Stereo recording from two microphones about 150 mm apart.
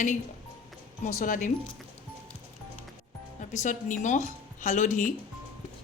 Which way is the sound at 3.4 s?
55° left (ahead or behind).